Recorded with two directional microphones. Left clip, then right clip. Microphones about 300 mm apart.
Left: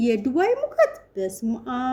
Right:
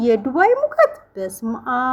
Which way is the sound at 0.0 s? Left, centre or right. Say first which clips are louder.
Right 6 dB; centre.